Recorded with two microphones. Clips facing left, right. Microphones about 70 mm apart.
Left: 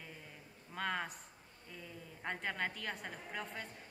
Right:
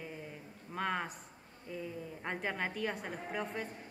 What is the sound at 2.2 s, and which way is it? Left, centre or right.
A woman's voice, centre.